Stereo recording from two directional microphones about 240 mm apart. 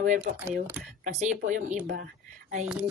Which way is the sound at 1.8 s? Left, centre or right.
Right.